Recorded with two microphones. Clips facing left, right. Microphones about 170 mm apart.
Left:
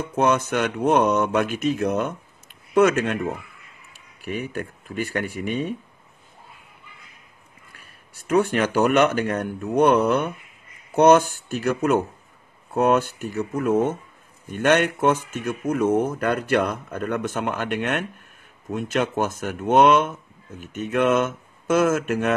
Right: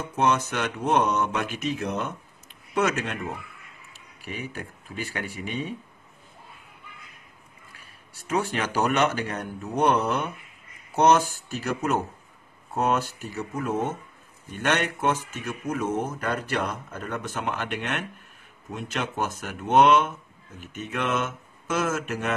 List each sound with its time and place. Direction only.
0.1 s speech: 50° left (ahead or behind)
8.3 s speech: 55° left (ahead or behind)